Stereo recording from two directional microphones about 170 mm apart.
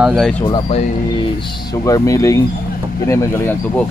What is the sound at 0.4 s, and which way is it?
Speech, 35° left (ahead or behind).